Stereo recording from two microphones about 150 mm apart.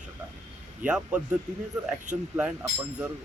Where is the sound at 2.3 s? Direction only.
10° right (ahead or behind).